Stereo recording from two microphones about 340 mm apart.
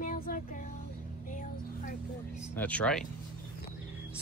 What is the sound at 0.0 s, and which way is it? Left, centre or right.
Music, left.